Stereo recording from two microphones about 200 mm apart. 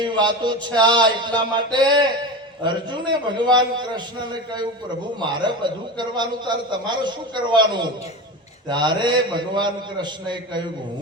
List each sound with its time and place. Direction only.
0.0 s a man's voice: 20° right (ahead or behind)